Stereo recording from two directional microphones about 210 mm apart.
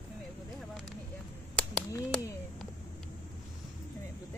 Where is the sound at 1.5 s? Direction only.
5° left (ahead or behind).